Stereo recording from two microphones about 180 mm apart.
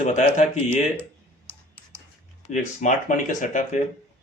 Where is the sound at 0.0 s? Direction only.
45° left (ahead or behind).